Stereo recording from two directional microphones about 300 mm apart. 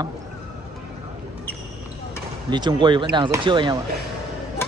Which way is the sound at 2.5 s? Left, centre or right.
Centre.